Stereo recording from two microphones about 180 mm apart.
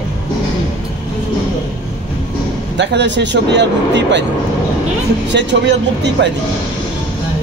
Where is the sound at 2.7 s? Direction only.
75° right (ahead or behind).